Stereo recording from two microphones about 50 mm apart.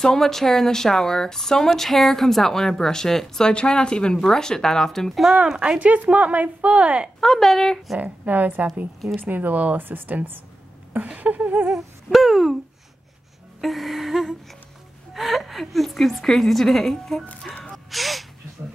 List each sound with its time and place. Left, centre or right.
0.0 s speech: centre
5.6 s speech: right
7.2 s a woman's voice: centre
8.0 s speech: right
12.1 s a woman's voice: centre
13.6 s a woman's voice: centre
17.9 s a woman's voice: centre